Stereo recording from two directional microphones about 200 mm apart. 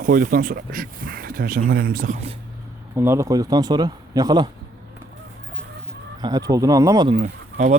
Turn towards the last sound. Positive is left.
turn(degrees=-35)  # may be behind; listen again after turning